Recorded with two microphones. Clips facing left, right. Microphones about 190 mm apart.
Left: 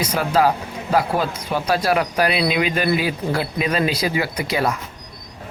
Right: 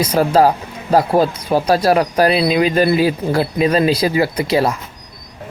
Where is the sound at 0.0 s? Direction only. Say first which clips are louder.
Right 5 dB; 35° right (ahead or behind).